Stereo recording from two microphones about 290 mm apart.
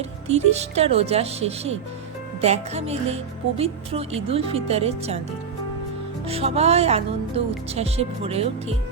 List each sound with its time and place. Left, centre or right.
0.3 s speech: right
6.2 s speech: right